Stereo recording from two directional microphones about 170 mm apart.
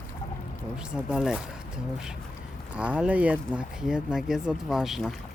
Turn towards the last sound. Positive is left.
turn(degrees=0)  # may be behind; listen again after turning